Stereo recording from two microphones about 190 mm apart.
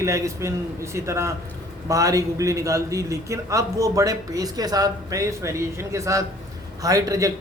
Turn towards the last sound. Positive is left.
turn(degrees=-15)  # may be behind; listen again after turning